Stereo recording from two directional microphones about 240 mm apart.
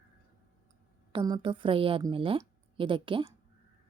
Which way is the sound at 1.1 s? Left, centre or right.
Centre.